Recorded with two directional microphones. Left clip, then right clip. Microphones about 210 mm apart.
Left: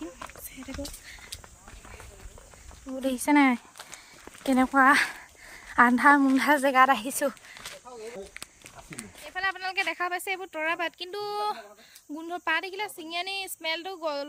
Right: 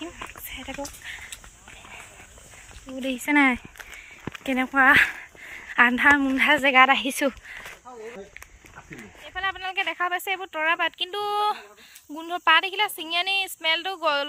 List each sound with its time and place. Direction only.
0.0 s a sound: 5° left (ahead or behind)
3.2 s speech: 20° left (ahead or behind)
4.4 s a sound: 25° left (ahead or behind)
5.7 s speech: 30° left (ahead or behind)
6.3 s speech: 35° left (ahead or behind)
9.0 s speech: 10° left (ahead or behind)